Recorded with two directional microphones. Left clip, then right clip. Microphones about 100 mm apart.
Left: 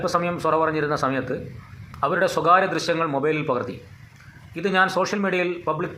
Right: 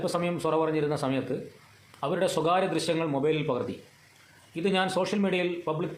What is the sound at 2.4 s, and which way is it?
Speech, 40° right (ahead or behind).